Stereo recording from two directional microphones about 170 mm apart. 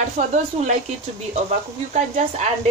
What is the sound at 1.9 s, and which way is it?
Speech, 40° right (ahead or behind).